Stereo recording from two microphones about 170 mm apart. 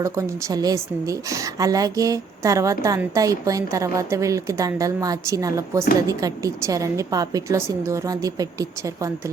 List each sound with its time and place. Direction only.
0.0 s a woman's voice: 20° right (ahead or behind)